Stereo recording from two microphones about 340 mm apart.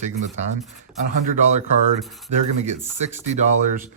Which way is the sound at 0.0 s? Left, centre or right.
Centre.